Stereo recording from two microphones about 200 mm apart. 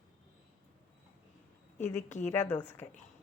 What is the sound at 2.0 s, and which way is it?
Speech, 35° left (ahead or behind).